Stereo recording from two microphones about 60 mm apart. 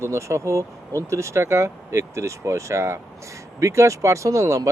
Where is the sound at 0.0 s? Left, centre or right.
Right.